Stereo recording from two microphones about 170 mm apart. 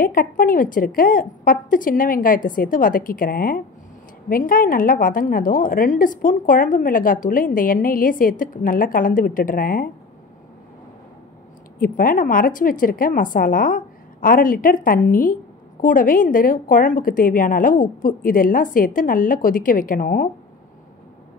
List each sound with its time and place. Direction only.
0.0 s a woman's voice: 55° left (ahead or behind)
11.8 s a woman's voice: 55° left (ahead or behind)